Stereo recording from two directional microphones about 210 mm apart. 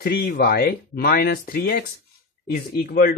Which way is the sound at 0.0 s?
45° left (ahead or behind).